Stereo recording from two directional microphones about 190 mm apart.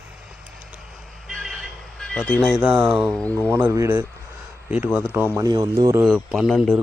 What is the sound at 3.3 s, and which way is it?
Speech, 15° right (ahead or behind).